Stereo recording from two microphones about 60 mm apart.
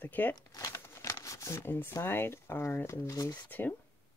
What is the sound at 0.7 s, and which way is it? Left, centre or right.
Shuffling cards, left.